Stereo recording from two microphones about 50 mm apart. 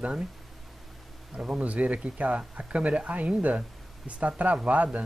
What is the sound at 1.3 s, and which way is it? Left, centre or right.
Speech, centre.